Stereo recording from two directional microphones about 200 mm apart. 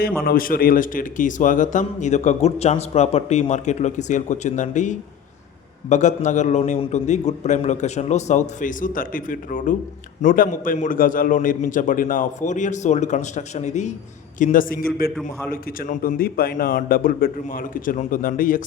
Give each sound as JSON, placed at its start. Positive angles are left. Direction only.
{"t": 0.2, "sound": "a man's voice", "side_deg": 50}